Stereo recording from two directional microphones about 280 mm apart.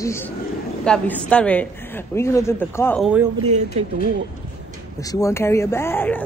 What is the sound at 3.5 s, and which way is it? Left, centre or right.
Speech, right.